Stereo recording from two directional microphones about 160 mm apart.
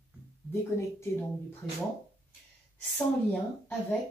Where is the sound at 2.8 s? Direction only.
10° left (ahead or behind).